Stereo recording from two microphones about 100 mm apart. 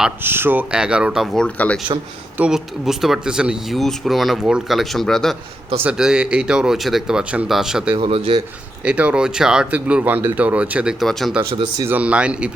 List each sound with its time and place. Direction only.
0.2 s speech: 20° right (ahead or behind)
0.7 s speech: 10° right (ahead or behind)
1.4 s speech: 15° left (ahead or behind)
2.4 s speech: 5° right (ahead or behind)
5.8 s speech: 10° right (ahead or behind)
7.9 s speech: 70° right (ahead or behind)
8.8 s speech: 10° right (ahead or behind)
11.0 s speech: centre (ahead or behind)
11.9 s speech: 15° right (ahead or behind)